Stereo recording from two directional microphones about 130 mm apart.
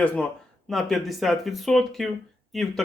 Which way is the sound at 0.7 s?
Centre (ahead or behind).